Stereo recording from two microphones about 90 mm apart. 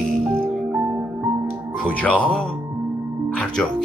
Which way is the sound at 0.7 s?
20° right (ahead or behind).